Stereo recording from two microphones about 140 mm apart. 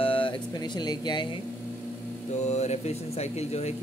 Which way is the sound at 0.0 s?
40° left (ahead or behind).